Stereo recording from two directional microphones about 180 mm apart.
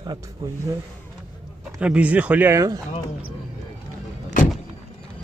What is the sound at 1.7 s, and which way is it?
Speech, 5° right (ahead or behind).